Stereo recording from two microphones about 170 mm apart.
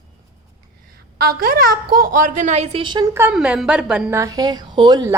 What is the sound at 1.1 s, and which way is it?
A woman's voice, 60° right (ahead or behind).